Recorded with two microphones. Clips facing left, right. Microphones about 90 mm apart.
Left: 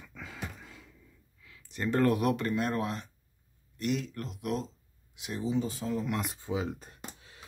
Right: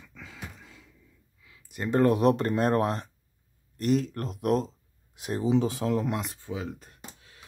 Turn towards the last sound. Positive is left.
turn(degrees=15)  # may be behind; listen again after turning